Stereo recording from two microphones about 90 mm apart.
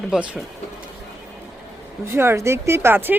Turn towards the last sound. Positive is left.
turn(degrees=-20)  # may be behind; listen again after turning